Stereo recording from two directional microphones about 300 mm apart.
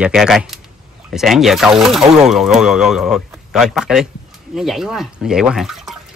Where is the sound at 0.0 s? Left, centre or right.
Centre.